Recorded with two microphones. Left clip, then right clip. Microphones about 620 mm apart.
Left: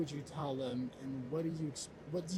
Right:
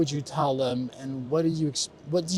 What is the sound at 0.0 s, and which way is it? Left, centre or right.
A man's voice, right.